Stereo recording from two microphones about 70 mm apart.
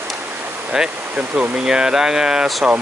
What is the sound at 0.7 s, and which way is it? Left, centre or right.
Speech, centre.